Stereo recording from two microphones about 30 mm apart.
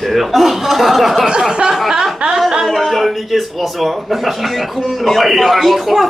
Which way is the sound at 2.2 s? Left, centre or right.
Right.